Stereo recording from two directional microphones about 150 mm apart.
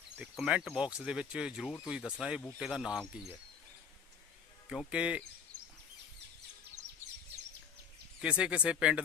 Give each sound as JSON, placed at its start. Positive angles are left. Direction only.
{"t": 0.2, "sound": "speech", "side_deg": -5}
{"t": 4.7, "sound": "speech", "side_deg": -5}
{"t": 5.5, "sound": "a sound", "side_deg": -70}
{"t": 8.2, "sound": "speech", "side_deg": -5}